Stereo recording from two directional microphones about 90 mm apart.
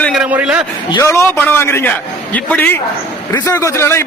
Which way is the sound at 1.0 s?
30° left (ahead or behind).